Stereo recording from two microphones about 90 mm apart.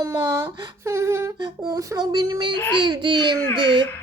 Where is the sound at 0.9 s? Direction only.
30° right (ahead or behind).